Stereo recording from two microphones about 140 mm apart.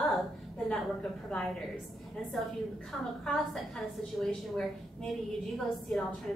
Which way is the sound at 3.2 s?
5° left (ahead or behind).